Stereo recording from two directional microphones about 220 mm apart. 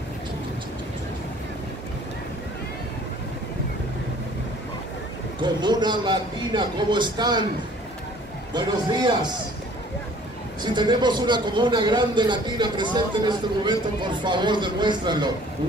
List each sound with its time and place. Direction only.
5.4 s a man's voice: 20° right (ahead or behind)
8.5 s a man's voice: 20° right (ahead or behind)
10.6 s a man's voice: 20° right (ahead or behind)